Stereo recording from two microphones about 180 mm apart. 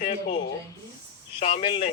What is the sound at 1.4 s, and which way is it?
Speech, 35° left (ahead or behind).